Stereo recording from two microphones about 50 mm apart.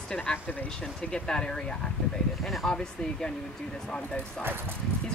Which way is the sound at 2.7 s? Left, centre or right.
Centre.